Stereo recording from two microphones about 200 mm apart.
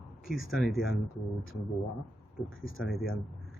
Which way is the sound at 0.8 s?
80° left.